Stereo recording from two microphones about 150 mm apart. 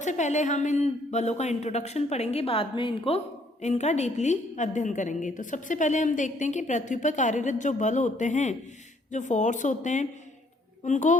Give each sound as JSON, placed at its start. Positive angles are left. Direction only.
{"t": 0.0, "sound": "a woman's voice", "side_deg": 50}
{"t": 3.6, "sound": "a woman's voice", "side_deg": 50}